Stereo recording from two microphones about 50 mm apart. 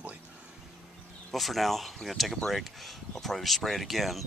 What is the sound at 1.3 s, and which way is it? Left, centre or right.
Speech, centre.